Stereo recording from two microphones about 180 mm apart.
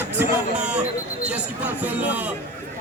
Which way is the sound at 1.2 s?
5° right (ahead or behind).